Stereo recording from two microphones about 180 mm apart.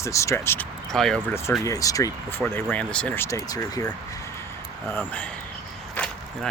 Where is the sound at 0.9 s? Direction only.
Centre (ahead or behind).